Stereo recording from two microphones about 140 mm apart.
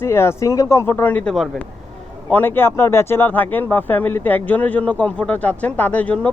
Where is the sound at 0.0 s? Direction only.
20° left (ahead or behind).